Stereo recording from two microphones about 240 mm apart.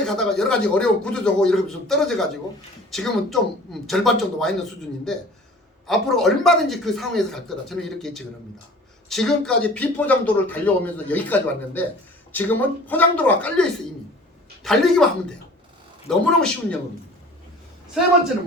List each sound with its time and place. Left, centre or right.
0.0 s speech: centre
5.9 s speech: centre